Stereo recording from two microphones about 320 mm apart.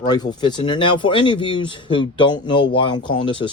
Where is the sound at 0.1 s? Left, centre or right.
Centre.